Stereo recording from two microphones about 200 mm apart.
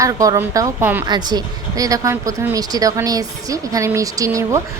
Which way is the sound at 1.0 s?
20° right (ahead or behind).